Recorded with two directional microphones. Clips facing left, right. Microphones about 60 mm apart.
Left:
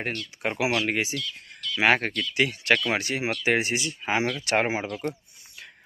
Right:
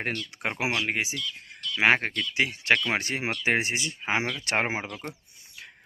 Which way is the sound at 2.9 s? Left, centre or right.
Right.